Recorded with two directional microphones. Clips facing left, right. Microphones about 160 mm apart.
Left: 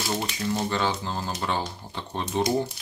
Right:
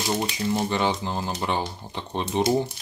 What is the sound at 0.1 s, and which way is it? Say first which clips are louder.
Speech: right 3 dB; 20° right (ahead or behind).